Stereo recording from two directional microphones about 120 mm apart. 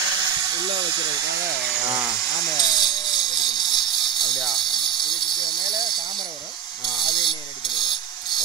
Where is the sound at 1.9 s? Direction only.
5° right (ahead or behind).